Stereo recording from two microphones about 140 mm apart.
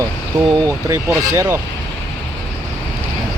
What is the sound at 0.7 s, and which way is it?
Speech, 20° right (ahead or behind).